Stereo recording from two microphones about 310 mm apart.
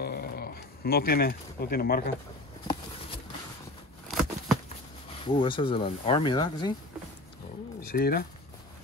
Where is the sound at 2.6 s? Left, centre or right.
Centre.